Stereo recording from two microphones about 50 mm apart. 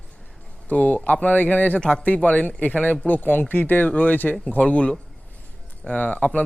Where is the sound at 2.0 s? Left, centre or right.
Left.